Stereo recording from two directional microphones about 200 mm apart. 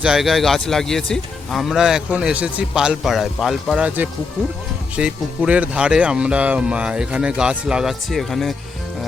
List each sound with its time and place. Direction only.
0.0 s speech: centre (ahead or behind)